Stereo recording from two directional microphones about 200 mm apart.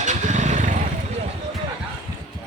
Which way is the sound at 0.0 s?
35° right (ahead or behind).